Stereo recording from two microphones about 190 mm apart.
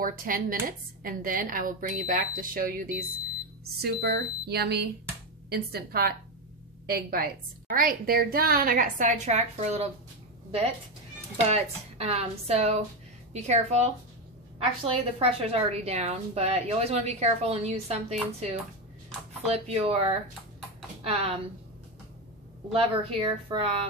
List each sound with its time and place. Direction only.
0.0 s a woman's voice: 45° right (ahead or behind)
3.7 s a woman's voice: 55° right (ahead or behind); by 9.8 s 35° right (ahead or behind)
11.4 s a woman's voice: 35° right (ahead or behind)
22.7 s a woman's voice: 30° right (ahead or behind)